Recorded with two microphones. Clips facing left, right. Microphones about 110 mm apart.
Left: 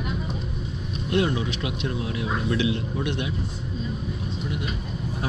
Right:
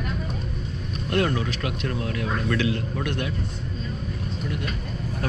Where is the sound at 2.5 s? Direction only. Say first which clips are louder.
Left 1 dB; 45° right (ahead or behind).